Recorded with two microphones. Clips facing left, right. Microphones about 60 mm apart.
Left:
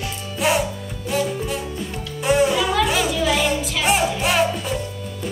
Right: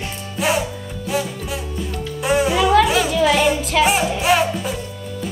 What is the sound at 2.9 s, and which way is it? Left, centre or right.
Music, right.